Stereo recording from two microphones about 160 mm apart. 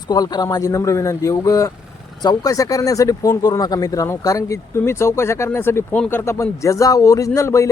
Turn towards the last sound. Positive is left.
turn(degrees=20)  # may be behind; listen again after turning